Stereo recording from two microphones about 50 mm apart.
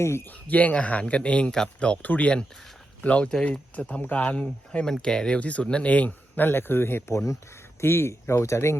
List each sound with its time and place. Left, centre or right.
0.0 s speech: left
0.3 s speech: left
4.9 s speech: centre
5.4 s speech: left
7.1 s speech: left
7.8 s speech: left